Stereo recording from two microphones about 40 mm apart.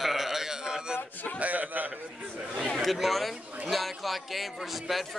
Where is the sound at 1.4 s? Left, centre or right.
Right.